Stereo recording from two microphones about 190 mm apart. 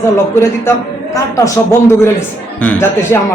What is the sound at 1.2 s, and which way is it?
A man's voice, 15° left (ahead or behind).